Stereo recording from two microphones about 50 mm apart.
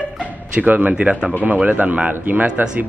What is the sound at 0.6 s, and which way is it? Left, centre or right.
Speech, right.